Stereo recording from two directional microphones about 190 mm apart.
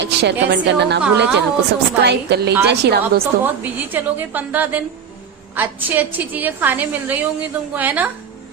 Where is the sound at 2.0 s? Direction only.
60° right (ahead or behind).